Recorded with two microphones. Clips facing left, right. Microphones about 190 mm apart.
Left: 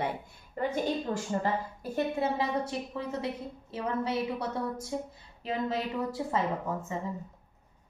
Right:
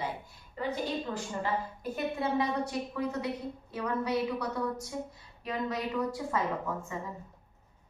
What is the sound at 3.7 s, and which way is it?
Speech, 25° left (ahead or behind).